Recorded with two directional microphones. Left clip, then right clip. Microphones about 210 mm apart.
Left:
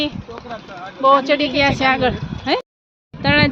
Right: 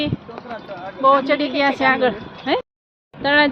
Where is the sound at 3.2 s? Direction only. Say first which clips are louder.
Even; 25° left (ahead or behind).